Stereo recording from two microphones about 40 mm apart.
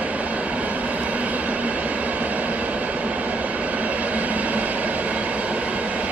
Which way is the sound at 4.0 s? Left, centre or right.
Right.